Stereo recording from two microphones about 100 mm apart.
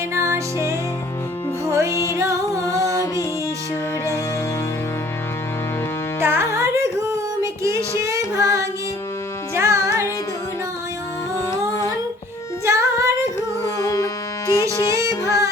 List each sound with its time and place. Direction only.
0.1 s music: 30° right (ahead or behind)
6.2 s carnatic music: 25° right (ahead or behind)
7.4 s music: 30° right (ahead or behind)
9.6 s music: 30° right (ahead or behind)
12.6 s music: 30° right (ahead or behind)
13.6 s music: 35° left (ahead or behind)